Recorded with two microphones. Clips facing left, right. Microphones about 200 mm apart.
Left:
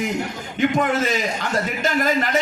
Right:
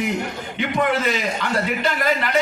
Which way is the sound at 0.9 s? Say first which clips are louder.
Even; 45° left (ahead or behind).